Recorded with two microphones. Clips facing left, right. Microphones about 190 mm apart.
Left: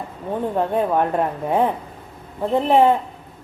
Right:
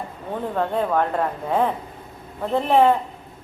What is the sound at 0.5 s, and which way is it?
Speech, 15° left (ahead or behind).